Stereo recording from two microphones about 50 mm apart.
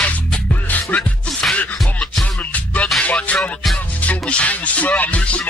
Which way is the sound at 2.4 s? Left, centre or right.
Left.